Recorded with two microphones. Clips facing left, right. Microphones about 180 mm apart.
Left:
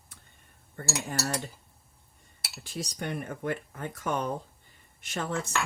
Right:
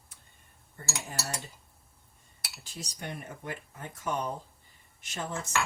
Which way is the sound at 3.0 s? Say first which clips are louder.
Left 6 dB; 65° left (ahead or behind).